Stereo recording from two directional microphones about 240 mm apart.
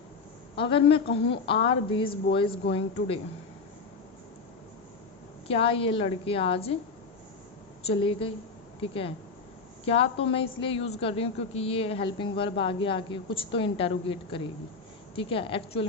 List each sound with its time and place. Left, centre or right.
0.5 s a woman's voice: left
5.5 s a woman's voice: left
7.9 s a woman's voice: left